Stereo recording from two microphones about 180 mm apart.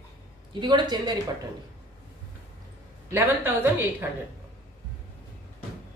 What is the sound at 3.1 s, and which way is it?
Speech, 10° right (ahead or behind).